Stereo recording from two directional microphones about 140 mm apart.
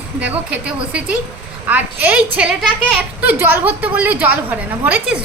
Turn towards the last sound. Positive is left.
turn(degrees=-15)  # may be behind; listen again after turning